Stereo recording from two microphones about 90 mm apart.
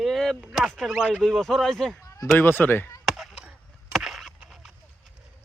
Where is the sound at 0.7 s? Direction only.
5° left (ahead or behind).